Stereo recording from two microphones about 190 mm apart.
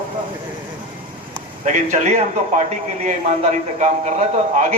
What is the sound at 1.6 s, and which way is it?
Speech, 40° right (ahead or behind).